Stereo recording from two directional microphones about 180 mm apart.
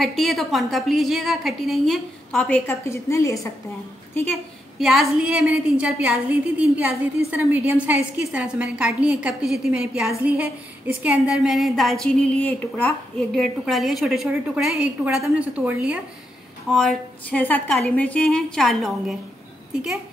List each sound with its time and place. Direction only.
0.0 s a woman's voice: centre (ahead or behind)
2.6 s a woman's voice: 15° left (ahead or behind)
4.7 s a woman's voice: centre (ahead or behind)